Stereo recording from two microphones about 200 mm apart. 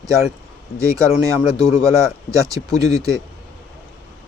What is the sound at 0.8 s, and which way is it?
Speech, 15° right (ahead or behind).